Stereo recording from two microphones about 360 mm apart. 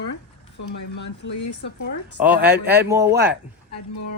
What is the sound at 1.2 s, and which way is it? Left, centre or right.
Speech, left.